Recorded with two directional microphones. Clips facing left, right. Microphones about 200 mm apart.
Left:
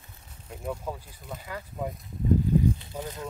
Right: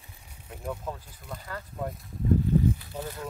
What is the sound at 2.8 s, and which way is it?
Speech, 20° left (ahead or behind).